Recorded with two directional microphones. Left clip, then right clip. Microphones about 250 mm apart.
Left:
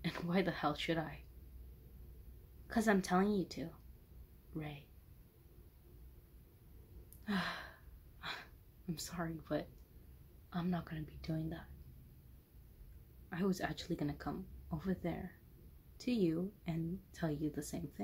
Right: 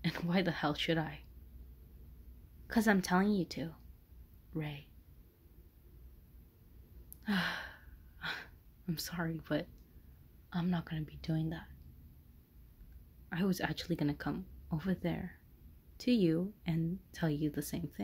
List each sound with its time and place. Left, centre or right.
0.0 s speech: right
2.7 s a woman's voice: right
7.2 s gasp: right
10.5 s a woman's voice: right
13.3 s a woman's voice: right